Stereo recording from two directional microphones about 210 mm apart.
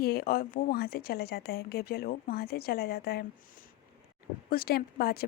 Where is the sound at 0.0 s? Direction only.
45° left (ahead or behind).